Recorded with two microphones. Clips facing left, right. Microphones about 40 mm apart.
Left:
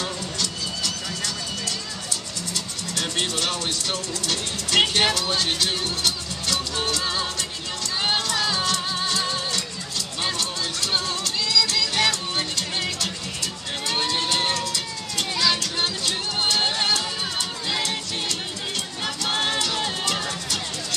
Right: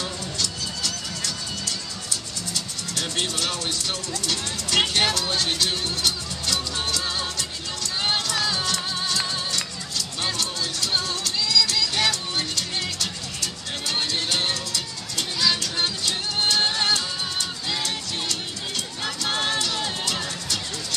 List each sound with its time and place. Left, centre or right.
0.8 s music: centre
8.9 s music: left
10.2 s music: centre
11.7 s music: centre
12.4 s music: centre
14.5 s music: centre
19.3 s music: centre